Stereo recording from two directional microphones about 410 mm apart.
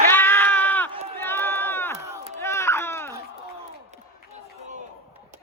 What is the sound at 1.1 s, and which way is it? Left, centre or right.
Crowd, centre.